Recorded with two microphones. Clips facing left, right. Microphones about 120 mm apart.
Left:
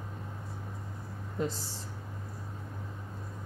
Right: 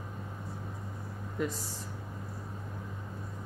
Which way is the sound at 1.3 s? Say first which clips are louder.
Even; 30° left (ahead or behind).